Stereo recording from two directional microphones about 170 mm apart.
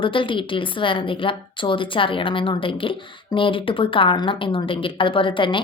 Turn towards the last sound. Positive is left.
turn(degrees=30)  # may be behind; listen again after turning